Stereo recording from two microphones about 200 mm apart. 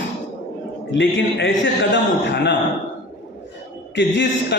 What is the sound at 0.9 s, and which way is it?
A man's voice, 70° left (ahead or behind).